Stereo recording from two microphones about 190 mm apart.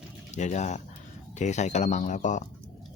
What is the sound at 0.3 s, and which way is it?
Speech, 40° left (ahead or behind).